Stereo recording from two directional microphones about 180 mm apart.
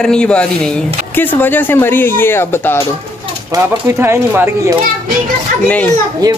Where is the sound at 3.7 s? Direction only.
15° right (ahead or behind).